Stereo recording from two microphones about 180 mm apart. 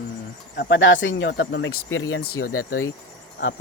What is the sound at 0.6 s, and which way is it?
Speech, 85° left.